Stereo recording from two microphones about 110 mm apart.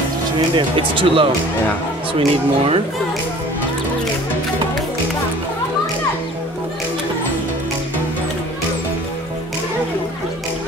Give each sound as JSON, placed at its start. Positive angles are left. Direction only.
{"t": 0.6, "sound": "speech", "side_deg": -55}